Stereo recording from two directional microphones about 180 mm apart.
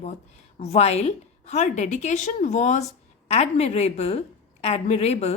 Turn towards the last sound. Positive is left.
turn(degrees=35)  # may be behind; listen again after turning